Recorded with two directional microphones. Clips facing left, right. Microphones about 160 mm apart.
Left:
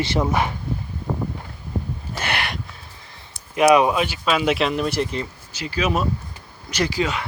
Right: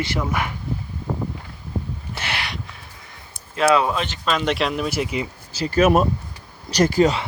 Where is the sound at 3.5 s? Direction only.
15° left (ahead or behind); by 5.3 s 5° right (ahead or behind).